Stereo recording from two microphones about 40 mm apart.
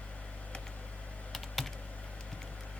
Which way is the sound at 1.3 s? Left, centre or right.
Centre.